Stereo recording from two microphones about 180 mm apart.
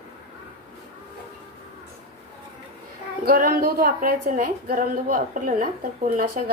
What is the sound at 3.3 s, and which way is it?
A woman's voice, 55° right (ahead or behind).